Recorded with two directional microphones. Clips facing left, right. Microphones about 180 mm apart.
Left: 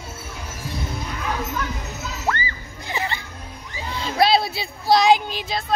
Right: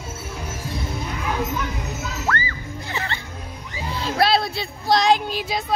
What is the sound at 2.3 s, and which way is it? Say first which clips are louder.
Music: left 1 dB; 20° left (ahead or behind).